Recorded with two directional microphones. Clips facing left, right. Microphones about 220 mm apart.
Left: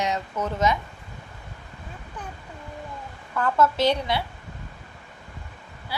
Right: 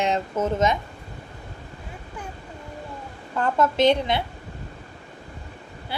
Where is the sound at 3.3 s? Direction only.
20° right (ahead or behind).